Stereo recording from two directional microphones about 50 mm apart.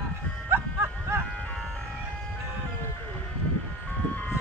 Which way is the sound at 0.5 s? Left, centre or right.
Right.